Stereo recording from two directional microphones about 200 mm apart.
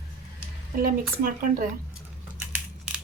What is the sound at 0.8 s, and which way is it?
Speech, 45° right (ahead or behind).